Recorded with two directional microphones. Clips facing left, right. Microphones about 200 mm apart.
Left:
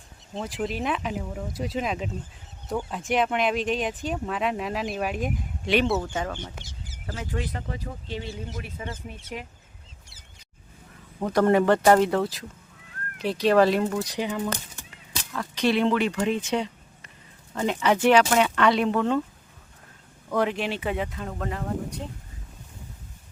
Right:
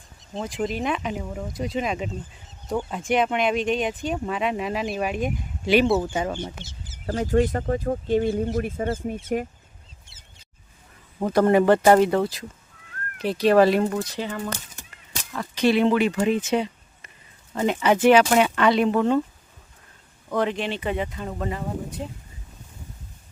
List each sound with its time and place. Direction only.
0.4 s speech: 5° left (ahead or behind); by 6.5 s 15° right (ahead or behind)
6.6 s speech: 10° left (ahead or behind)
7.0 s speech: 30° right (ahead or behind)
7.3 s speech: 45° right (ahead or behind)
11.3 s speech: 5° right (ahead or behind)
14.0 s speech: 15° left (ahead or behind)
15.3 s speech: 5° right (ahead or behind)
16.5 s a sound: 5° right (ahead or behind)
17.5 s speech: 5° right (ahead or behind)
20.3 s speech: 5° left (ahead or behind)